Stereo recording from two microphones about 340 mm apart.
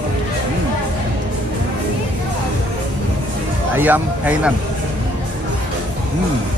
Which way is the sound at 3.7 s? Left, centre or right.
Centre.